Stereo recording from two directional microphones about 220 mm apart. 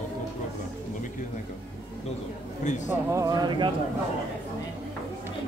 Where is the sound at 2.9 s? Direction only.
15° right (ahead or behind).